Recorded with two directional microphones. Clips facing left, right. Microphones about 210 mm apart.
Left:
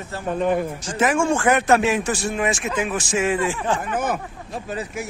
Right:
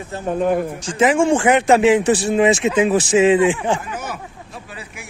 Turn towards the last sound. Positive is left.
turn(degrees=45)  # may be behind; listen again after turning